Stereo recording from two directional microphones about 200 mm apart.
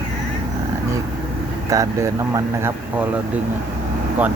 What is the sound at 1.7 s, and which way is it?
Speech, 15° right (ahead or behind).